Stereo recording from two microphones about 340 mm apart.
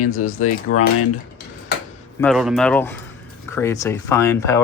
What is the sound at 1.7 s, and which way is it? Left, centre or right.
Tick-tock, left.